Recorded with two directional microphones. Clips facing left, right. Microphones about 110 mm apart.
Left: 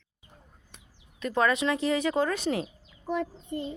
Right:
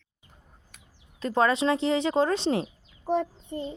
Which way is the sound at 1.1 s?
30° right (ahead or behind).